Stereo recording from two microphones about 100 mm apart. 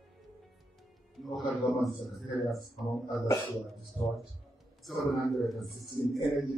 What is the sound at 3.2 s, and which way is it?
Speech, 50° left (ahead or behind).